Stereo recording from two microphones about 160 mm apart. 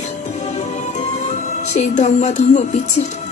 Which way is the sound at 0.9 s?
50° left (ahead or behind).